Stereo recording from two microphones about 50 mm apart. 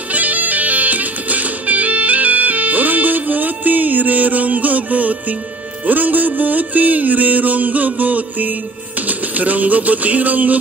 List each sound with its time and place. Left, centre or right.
0.1 s music: right